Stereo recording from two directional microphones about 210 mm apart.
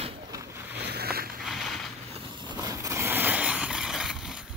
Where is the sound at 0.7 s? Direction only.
50° right (ahead or behind).